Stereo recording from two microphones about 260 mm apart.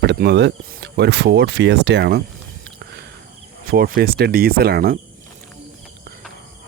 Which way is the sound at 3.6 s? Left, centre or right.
Right.